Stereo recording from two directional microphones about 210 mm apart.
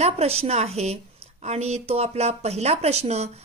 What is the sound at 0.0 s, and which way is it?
A woman's voice, 30° right (ahead or behind).